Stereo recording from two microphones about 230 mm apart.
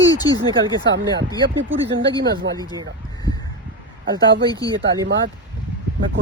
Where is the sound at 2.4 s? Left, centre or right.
Right.